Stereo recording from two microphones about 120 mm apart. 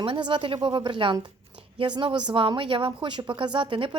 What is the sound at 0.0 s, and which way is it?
A woman's voice, 45° right (ahead or behind).